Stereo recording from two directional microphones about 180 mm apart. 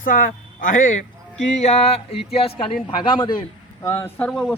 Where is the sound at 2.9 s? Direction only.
25° left (ahead or behind).